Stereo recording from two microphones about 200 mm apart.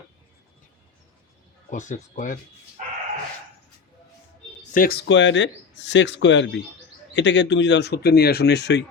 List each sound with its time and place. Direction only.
1.7 s speech: 40° left (ahead or behind)
2.8 s dog: 40° right (ahead or behind)
4.7 s speech: 45° left (ahead or behind)